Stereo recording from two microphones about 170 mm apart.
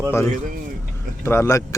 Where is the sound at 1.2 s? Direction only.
15° left (ahead or behind).